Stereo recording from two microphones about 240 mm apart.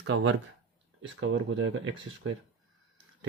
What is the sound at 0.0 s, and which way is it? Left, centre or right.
Speech, right.